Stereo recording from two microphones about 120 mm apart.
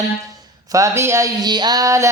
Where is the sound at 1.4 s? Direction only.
35° right (ahead or behind).